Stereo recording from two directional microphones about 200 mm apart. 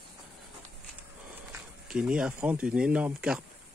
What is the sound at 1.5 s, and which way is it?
Speech, 5° right (ahead or behind).